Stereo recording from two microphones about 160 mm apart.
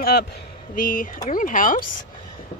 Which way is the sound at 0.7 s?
60° left (ahead or behind).